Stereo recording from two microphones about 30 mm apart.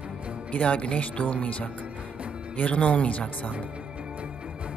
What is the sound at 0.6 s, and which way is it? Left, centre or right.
Speech, left.